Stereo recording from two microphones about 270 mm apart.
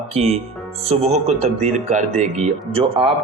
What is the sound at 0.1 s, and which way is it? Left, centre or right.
Speech, right.